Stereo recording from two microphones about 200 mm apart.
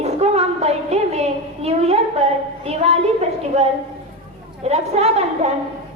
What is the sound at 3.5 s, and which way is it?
A woman's voice, 35° right (ahead or behind).